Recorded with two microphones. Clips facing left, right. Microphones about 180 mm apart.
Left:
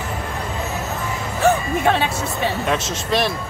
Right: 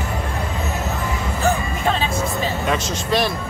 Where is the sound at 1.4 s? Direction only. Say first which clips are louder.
Left 4 dB; 65° left (ahead or behind).